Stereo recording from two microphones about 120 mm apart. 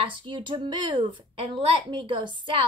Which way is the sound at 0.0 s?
40° right (ahead or behind).